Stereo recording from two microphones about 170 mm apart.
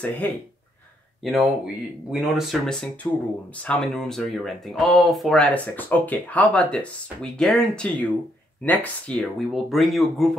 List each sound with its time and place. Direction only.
0.2 s speech: 10° left (ahead or behind)
1.2 s speech: centre (ahead or behind)